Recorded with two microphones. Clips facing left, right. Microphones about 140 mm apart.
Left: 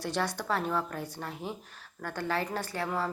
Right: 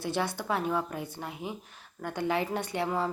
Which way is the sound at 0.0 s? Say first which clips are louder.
Right 1 dB; 10° right (ahead or behind).